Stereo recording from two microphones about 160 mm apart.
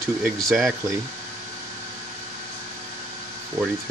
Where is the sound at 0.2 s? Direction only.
Centre (ahead or behind).